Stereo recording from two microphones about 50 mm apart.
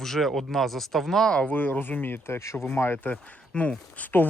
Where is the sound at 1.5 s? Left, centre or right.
Left.